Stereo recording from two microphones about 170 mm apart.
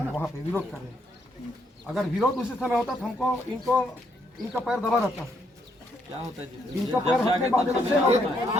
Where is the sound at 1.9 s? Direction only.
Centre (ahead or behind).